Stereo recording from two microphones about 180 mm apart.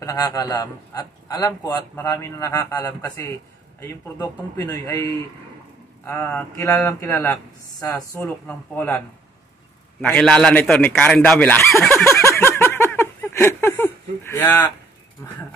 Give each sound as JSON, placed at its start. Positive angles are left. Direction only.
{"t": 0.0, "sound": "a man's voice", "side_deg": 20}
{"t": 4.6, "sound": "a man's voice", "side_deg": 10}
{"t": 6.0, "sound": "a man's voice", "side_deg": 10}
{"t": 10.0, "sound": "a man's voice", "side_deg": 5}
{"t": 11.9, "sound": "a sound", "side_deg": 15}